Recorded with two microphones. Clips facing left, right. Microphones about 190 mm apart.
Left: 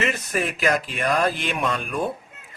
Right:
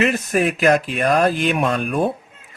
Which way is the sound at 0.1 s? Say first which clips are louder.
Right 7 dB; 45° right (ahead or behind).